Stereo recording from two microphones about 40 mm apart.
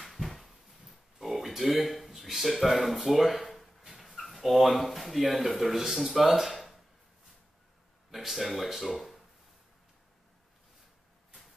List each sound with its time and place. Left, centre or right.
0.0 s a sound: centre
4.4 s speech: centre
8.1 s speech: centre